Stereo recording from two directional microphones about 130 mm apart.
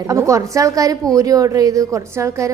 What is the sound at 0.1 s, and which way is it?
A woman's voice, 25° right (ahead or behind).